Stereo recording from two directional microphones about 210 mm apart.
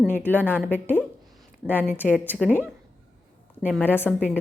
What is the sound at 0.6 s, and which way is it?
Speech, 10° left (ahead or behind).